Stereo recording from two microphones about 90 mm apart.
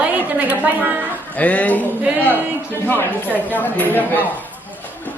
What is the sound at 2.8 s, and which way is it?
Speech, 20° left (ahead or behind).